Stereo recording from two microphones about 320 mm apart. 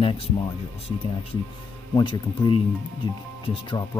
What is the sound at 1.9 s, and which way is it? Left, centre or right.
Speech, centre.